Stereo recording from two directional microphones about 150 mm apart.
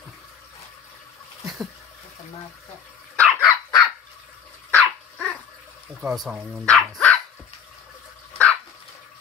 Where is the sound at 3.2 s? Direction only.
15° left (ahead or behind).